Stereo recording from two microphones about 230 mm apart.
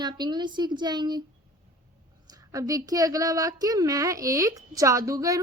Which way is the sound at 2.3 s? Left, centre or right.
Centre.